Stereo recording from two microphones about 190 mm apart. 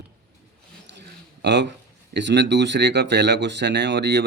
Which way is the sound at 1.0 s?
65° right (ahead or behind).